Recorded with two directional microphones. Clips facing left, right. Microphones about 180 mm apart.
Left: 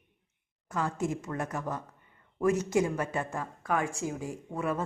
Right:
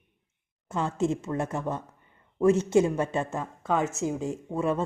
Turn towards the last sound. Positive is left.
turn(degrees=-25)  # may be behind; listen again after turning